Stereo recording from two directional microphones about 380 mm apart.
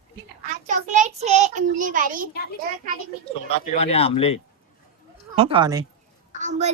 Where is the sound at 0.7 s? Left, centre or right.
Centre.